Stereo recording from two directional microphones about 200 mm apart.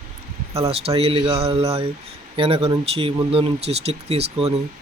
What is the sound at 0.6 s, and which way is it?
Speech, 30° right (ahead or behind).